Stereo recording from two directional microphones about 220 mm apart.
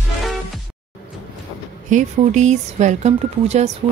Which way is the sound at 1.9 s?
35° right (ahead or behind).